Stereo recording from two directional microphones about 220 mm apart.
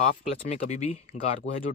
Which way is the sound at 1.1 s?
50° left (ahead or behind).